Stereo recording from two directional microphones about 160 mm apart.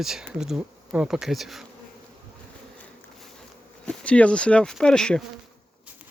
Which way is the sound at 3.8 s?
5° left (ahead or behind).